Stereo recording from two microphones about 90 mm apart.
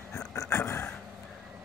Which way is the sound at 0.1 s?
30° left (ahead or behind).